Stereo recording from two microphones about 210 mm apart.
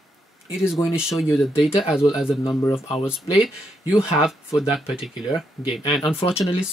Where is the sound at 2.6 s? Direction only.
15° left (ahead or behind).